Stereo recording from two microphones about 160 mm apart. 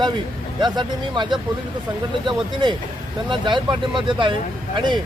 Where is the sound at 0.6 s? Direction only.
30° right (ahead or behind).